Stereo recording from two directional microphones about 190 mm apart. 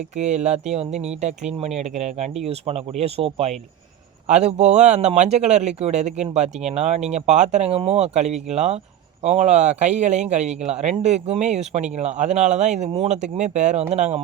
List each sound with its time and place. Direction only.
0.2 s speech: 35° right (ahead or behind)